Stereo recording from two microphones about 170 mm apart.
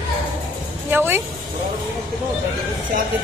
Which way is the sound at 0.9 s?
15° right (ahead or behind).